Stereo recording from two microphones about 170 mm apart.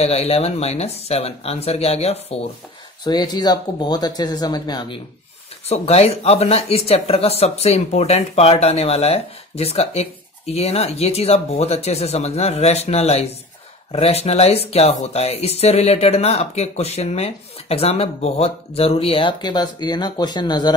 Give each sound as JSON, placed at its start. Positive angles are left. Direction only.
{"t": 0.0, "sound": "speech", "side_deg": 35}
{"t": 3.0, "sound": "speech", "side_deg": 25}
{"t": 5.7, "sound": "speech", "side_deg": 40}